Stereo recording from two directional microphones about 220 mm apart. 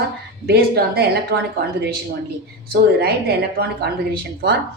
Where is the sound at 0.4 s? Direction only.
45° right (ahead or behind).